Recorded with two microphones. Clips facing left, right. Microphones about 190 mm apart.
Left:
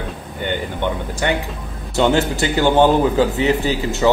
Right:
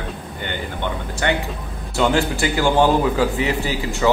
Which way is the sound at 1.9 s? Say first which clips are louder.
Left 2 dB; 20° left (ahead or behind).